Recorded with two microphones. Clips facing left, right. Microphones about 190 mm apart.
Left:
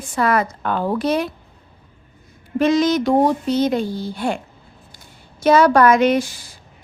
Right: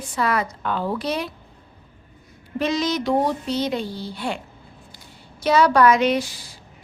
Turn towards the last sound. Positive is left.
turn(degrees=50)  # may be behind; listen again after turning